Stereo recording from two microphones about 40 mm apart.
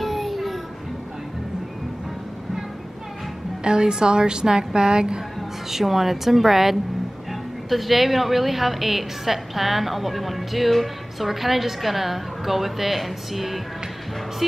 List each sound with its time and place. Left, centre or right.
0.0 s a sound: centre
3.6 s a woman's voice: centre
5.7 s a woman's voice: centre